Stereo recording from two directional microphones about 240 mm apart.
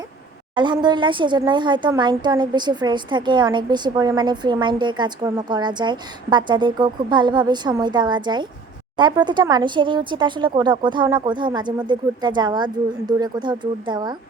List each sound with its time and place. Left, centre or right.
0.5 s speech: centre